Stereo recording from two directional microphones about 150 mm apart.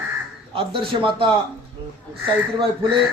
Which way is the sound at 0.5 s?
35° right (ahead or behind).